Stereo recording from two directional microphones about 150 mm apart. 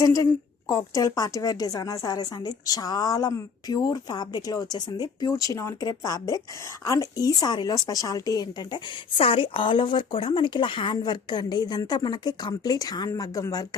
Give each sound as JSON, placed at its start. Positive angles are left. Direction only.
{"t": 0.0, "sound": "a woman's voice", "side_deg": 20}